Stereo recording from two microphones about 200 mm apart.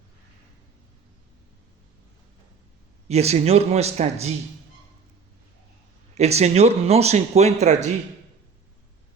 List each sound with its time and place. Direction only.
3.1 s speech: 30° right (ahead or behind)
6.1 s speech: 35° right (ahead or behind)